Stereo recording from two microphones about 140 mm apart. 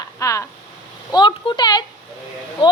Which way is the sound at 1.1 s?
35° left (ahead or behind).